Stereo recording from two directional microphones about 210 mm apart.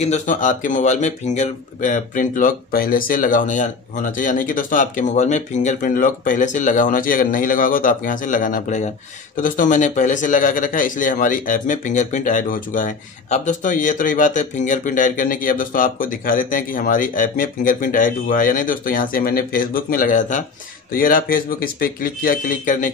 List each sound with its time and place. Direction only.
0.0 s speech: 35° left (ahead or behind)